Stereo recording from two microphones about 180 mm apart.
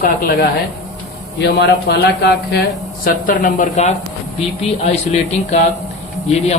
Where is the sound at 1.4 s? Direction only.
75° left (ahead or behind).